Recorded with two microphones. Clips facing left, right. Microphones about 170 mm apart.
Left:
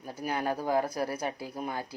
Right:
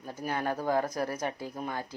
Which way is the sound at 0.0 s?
10° left (ahead or behind).